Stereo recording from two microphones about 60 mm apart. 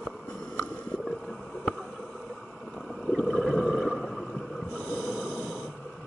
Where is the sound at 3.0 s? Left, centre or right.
Centre.